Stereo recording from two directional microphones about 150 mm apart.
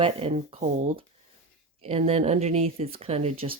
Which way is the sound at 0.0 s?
40° right (ahead or behind).